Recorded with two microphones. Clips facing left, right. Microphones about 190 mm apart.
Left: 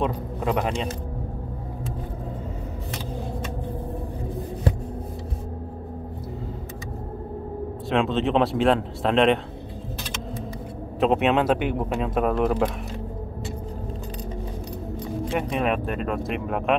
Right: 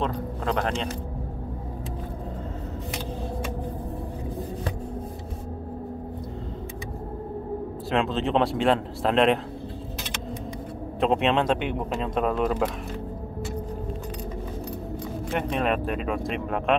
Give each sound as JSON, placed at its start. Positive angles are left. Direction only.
{"t": 0.0, "sound": "speech", "side_deg": 10}
{"t": 7.9, "sound": "speech", "side_deg": 0}
{"t": 11.0, "sound": "speech", "side_deg": 0}
{"t": 15.3, "sound": "speech", "side_deg": 0}